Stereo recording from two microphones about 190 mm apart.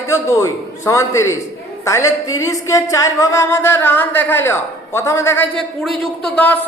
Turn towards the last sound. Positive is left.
turn(degrees=10)  # may be behind; listen again after turning